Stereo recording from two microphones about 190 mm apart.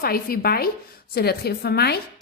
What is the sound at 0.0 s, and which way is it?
A woman's voice, 50° left (ahead or behind).